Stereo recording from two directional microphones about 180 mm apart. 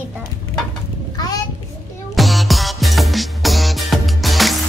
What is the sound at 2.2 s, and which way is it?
Music, centre (ahead or behind).